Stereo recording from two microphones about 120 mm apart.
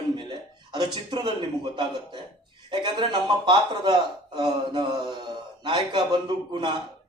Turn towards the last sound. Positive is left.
turn(degrees=-40)  # may be behind; listen again after turning